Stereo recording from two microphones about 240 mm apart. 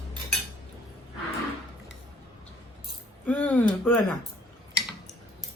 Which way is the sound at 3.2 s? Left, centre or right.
Centre.